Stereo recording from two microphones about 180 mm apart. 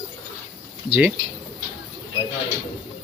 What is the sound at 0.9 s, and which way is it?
Speech, 10° right (ahead or behind).